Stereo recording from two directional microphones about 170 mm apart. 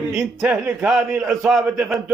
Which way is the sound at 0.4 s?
10° right (ahead or behind).